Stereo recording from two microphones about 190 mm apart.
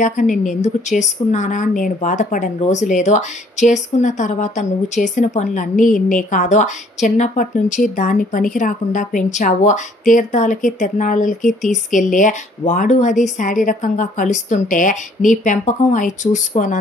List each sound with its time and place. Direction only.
0.0 s a woman's voice: 40° left (ahead or behind)